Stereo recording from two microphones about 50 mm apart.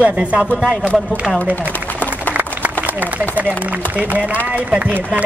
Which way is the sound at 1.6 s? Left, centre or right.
Left.